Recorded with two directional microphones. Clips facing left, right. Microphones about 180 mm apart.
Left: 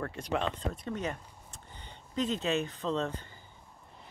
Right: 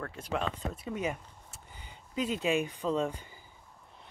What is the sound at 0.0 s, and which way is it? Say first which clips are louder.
Speech: left 2 dB; centre (ahead or behind).